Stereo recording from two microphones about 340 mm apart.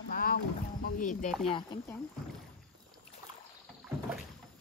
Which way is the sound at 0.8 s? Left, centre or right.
Left.